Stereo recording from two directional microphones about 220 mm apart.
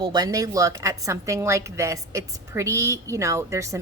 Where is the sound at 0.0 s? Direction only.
20° right (ahead or behind).